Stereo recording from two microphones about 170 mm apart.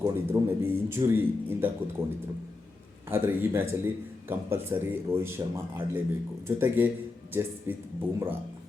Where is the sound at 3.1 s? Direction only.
10° right (ahead or behind).